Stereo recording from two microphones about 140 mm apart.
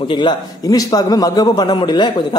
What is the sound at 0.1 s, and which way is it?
A man's voice, 35° left (ahead or behind).